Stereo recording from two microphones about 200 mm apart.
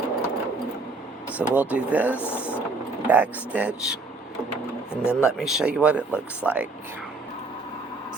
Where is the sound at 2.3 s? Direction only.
5° right (ahead or behind).